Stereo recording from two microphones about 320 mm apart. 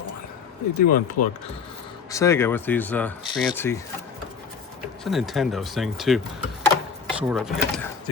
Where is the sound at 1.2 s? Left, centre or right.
Left.